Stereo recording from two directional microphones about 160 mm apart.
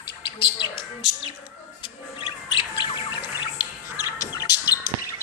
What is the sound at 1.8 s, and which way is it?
Bird, 30° left (ahead or behind).